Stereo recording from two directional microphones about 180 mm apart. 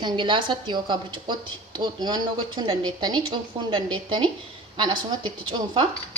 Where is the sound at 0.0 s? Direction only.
25° right (ahead or behind).